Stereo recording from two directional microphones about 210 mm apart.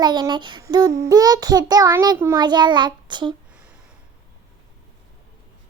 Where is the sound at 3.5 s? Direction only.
5° right (ahead or behind).